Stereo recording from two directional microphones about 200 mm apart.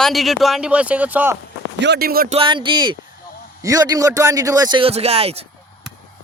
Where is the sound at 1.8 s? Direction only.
55° right (ahead or behind).